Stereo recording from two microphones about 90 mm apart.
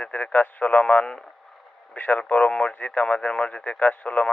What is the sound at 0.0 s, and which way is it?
Speech, 15° left (ahead or behind).